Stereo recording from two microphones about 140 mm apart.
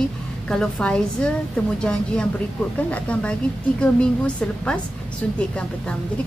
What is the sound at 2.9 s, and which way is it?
A woman's voice, 10° left (ahead or behind).